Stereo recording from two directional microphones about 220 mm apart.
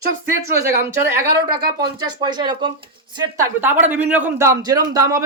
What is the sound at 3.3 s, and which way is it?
Speech, 10° right (ahead or behind).